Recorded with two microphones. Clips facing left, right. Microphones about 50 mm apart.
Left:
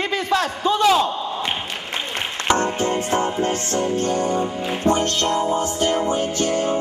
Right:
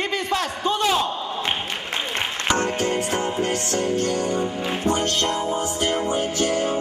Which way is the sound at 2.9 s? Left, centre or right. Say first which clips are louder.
Left 2 dB; left.